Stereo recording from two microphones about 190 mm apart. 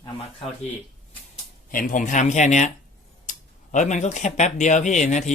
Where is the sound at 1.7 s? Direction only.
45° left (ahead or behind).